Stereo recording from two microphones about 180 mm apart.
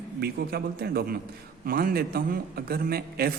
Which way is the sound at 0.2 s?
60° right (ahead or behind).